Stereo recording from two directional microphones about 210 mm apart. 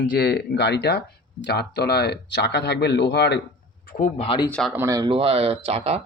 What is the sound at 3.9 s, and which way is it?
Speech, 40° left (ahead or behind).